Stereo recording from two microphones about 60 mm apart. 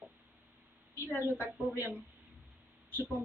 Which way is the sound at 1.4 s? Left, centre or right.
Right.